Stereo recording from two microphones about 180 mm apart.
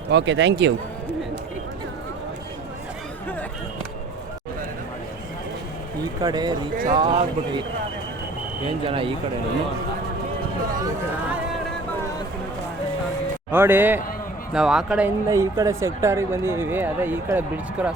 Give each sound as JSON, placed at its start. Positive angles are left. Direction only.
{"t": 0.1, "sound": "speech", "side_deg": -80}
{"t": 6.2, "sound": "speech", "side_deg": -25}
{"t": 8.9, "sound": "speech", "side_deg": -30}
{"t": 13.5, "sound": "a man's voice", "side_deg": -10}
{"t": 15.3, "sound": "speech", "side_deg": -20}